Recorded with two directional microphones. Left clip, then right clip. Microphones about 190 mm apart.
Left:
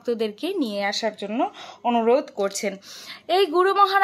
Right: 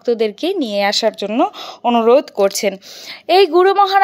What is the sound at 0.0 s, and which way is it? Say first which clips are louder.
Speech: right 9 dB; 30° right (ahead or behind).